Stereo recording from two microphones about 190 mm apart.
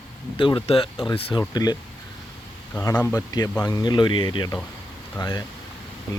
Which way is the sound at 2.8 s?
15° left (ahead or behind).